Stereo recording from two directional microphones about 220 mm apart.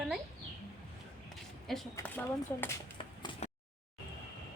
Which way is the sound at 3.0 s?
25° left (ahead or behind).